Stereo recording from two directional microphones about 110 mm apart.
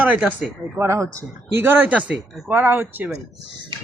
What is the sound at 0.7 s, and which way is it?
Speech, 25° right (ahead or behind).